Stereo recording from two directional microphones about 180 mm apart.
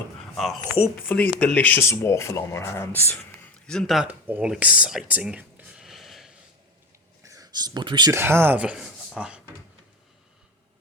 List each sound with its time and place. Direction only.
0.3 s speech: centre (ahead or behind)
7.2 s a sound: 20° right (ahead or behind)
8.1 s speech: 15° right (ahead or behind)